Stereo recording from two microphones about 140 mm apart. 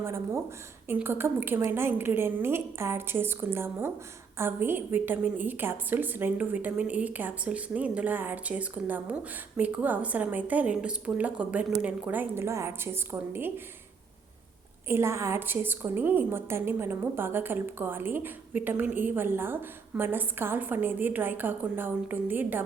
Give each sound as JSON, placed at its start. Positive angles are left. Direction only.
{"t": 0.9, "sound": "a woman's voice", "side_deg": -15}
{"t": 14.8, "sound": "a woman's voice", "side_deg": -20}